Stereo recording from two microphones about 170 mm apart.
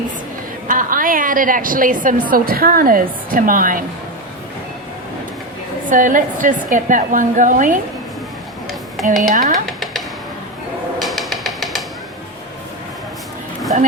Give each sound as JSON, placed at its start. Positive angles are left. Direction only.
{"t": 0.7, "sound": "a woman's voice", "side_deg": -55}
{"t": 5.9, "sound": "a woman's voice", "side_deg": -50}
{"t": 9.0, "sound": "speech", "side_deg": 0}
{"t": 9.3, "sound": "a woman's voice", "side_deg": -50}
{"t": 9.6, "sound": "music", "side_deg": 0}
{"t": 11.0, "sound": "music", "side_deg": 0}
{"t": 13.7, "sound": "speech", "side_deg": -50}